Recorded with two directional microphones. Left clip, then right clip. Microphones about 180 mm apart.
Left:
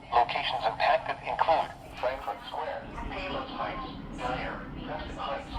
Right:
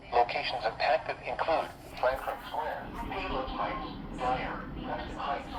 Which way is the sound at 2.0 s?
25° right (ahead or behind).